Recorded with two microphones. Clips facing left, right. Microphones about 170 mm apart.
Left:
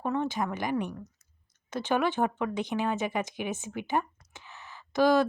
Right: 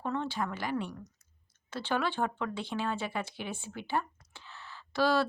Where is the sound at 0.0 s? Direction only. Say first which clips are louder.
Left 4 dB; 15° left (ahead or behind).